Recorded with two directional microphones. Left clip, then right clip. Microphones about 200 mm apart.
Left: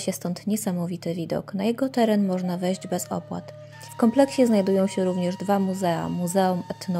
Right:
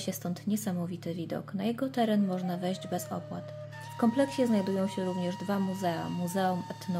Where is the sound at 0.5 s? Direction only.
30° left (ahead or behind).